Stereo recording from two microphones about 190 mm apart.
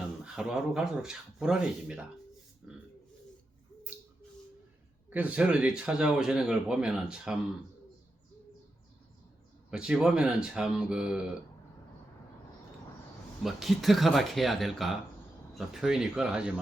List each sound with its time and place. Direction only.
0.3 s speech: 5° right (ahead or behind)
5.1 s speech: 5° right (ahead or behind)
9.6 s speech: 5° right (ahead or behind)
13.4 s speech: centre (ahead or behind)